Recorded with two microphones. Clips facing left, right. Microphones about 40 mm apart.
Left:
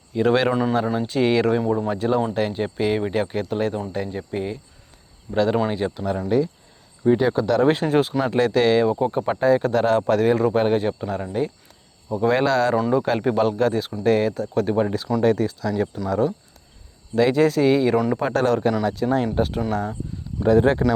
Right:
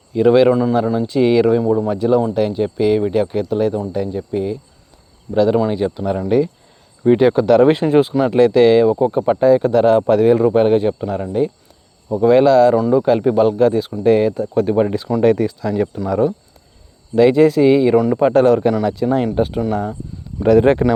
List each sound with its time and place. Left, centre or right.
0.1 s a man's voice: centre
5.8 s speech: centre
7.0 s speech: right
7.4 s speech: right
7.7 s speech: centre
12.7 s speech: centre; by 15.1 s right
15.2 s speech: right
15.7 s speech: right; by 18.2 s centre
18.2 s speech: centre
20.4 s speech: right